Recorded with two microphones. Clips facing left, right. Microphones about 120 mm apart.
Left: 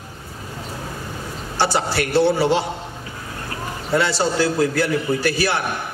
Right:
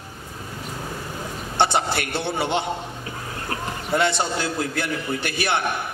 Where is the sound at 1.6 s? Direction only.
20° right (ahead or behind).